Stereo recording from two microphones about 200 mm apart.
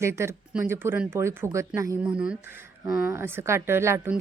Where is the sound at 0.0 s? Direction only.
15° right (ahead or behind).